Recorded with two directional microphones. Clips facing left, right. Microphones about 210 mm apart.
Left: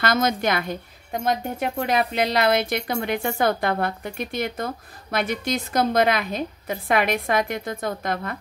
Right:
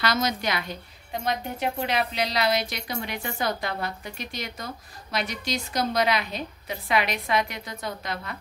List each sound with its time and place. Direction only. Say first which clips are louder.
0.0 s speech: left 4 dB; 50° left (ahead or behind)